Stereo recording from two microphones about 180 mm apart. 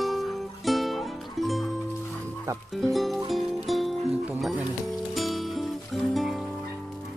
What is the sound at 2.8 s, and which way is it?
Music, centre (ahead or behind).